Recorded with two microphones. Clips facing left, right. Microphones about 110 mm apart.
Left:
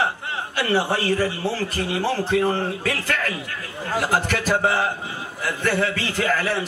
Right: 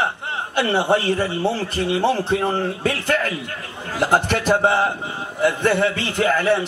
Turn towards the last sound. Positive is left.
turn(degrees=-25)  # may be behind; listen again after turning